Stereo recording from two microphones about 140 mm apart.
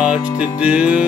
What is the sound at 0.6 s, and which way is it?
Music, 10° right (ahead or behind).